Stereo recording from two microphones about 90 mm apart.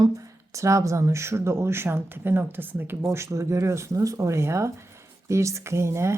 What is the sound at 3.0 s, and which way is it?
Speech, 35° right (ahead or behind).